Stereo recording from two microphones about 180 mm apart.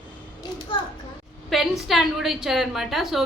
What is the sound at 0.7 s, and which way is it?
Speech, 25° left (ahead or behind).